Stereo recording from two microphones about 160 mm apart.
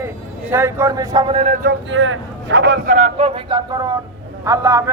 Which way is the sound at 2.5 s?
90° right.